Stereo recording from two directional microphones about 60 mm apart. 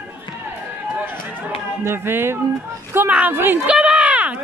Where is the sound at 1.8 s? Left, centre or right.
Right.